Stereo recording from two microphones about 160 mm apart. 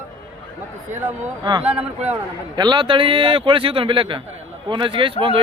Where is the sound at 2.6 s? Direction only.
30° right (ahead or behind).